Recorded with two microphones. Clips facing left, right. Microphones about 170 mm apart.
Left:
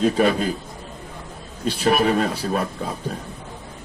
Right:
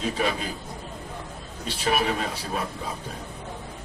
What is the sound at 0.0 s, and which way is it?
Speech, 50° left (ahead or behind).